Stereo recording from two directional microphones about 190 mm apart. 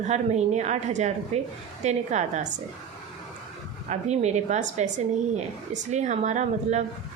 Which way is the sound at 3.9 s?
35° right (ahead or behind).